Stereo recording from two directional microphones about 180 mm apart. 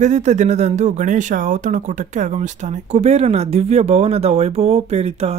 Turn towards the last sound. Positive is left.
turn(degrees=-35)  # may be behind; listen again after turning